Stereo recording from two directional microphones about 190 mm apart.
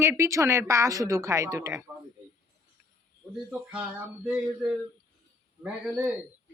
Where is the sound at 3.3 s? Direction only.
5° right (ahead or behind).